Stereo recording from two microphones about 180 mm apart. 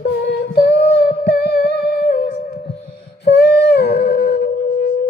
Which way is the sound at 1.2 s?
60° left (ahead or behind).